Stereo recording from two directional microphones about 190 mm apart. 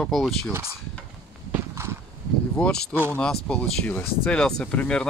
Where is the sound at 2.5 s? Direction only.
5° left (ahead or behind).